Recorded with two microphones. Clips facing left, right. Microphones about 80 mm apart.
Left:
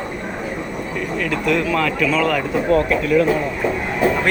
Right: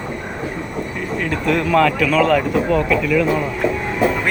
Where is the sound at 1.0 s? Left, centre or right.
Right.